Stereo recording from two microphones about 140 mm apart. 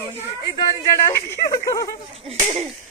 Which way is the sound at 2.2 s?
50° right (ahead or behind).